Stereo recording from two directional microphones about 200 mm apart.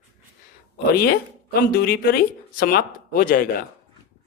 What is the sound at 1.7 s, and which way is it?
Speech, 50° left (ahead or behind).